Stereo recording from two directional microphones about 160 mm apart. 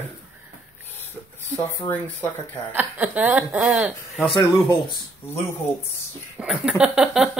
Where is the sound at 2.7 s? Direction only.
10° right (ahead or behind).